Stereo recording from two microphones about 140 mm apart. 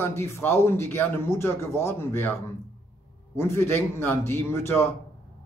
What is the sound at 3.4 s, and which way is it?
A man's voice, 15° left (ahead or behind).